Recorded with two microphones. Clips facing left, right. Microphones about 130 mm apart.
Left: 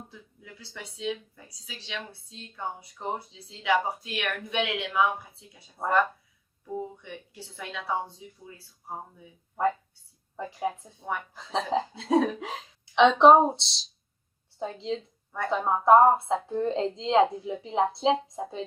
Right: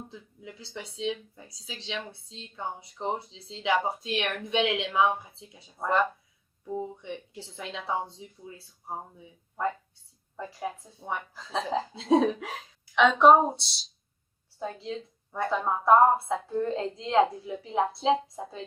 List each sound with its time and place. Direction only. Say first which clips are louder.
0.1 s speech: right 4 dB; 20° right (ahead or behind)
7.5 s speech: even; 25° right (ahead or behind)
10.3 s a woman's voice: left 4 dB; 20° left (ahead or behind)
11.0 s a woman's voice: left 1 dB; 10° right (ahead or behind)
11.3 s a woman's voice: left 2 dB; 20° left (ahead or behind)
11.9 s speech: right 2 dB; 25° right (ahead or behind)
12.4 s a woman's voice: left 2 dB; 20° left (ahead or behind)